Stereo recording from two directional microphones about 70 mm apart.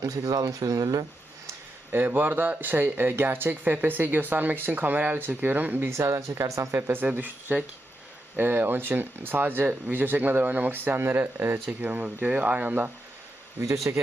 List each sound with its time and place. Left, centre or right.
0.0 s speech: right
1.9 s speech: right
5.9 s speech: right
7.0 s speech: right
13.9 s speech: right